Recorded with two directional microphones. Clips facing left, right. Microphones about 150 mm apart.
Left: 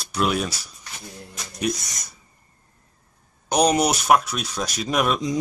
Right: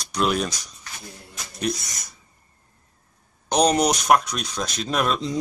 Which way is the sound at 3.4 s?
10° left (ahead or behind).